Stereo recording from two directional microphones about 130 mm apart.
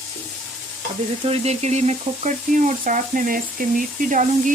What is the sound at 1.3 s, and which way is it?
Frying, 55° right (ahead or behind).